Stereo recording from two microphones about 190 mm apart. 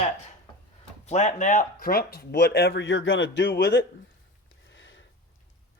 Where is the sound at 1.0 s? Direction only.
40° left (ahead or behind); by 3.9 s 55° left (ahead or behind).